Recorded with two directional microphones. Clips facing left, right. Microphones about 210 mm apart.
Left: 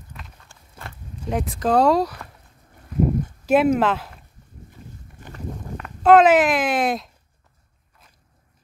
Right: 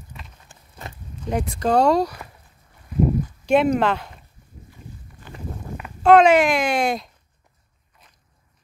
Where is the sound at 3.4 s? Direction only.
5° left (ahead or behind).